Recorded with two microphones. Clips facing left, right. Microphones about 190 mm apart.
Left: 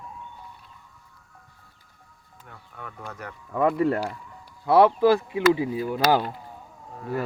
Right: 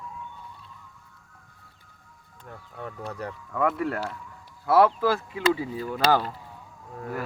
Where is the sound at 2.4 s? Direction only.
35° right (ahead or behind).